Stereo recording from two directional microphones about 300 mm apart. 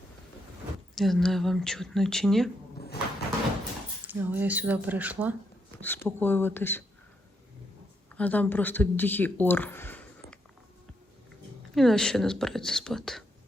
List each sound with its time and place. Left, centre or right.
0.9 s speech: centre
2.7 s a sound: left
4.0 s speech: centre
5.8 s speech: centre
8.1 s speech: centre
11.7 s speech: centre